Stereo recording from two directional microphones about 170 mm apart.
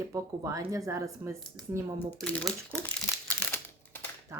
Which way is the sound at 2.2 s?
5° left (ahead or behind).